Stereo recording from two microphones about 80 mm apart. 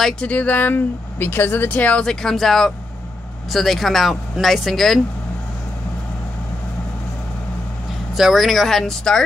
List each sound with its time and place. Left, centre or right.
0.0 s speech: centre
2.0 s speech: centre
8.1 s speech: centre